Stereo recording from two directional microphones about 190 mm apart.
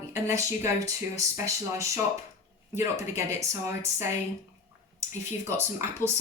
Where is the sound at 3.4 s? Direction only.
15° right (ahead or behind).